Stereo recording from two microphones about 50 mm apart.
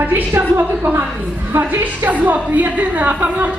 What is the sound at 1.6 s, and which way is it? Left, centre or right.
A woman's voice, right.